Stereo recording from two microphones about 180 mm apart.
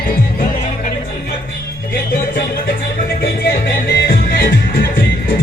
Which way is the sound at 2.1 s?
55° left (ahead or behind).